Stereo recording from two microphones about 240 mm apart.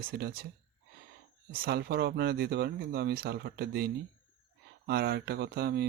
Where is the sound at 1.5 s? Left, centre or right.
Right.